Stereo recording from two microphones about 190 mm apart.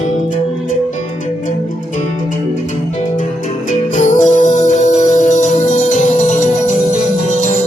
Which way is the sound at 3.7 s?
40° left (ahead or behind).